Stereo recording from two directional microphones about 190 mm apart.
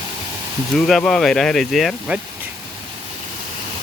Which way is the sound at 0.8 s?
5° left (ahead or behind).